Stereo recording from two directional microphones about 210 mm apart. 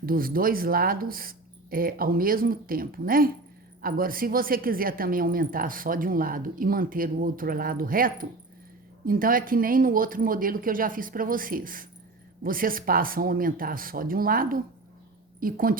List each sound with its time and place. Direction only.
0.0 s a woman's voice: 45° right (ahead or behind)